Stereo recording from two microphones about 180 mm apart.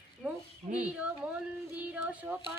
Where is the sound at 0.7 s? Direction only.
50° right (ahead or behind).